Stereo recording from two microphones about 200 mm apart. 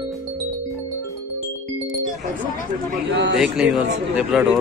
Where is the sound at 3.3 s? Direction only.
Centre (ahead or behind).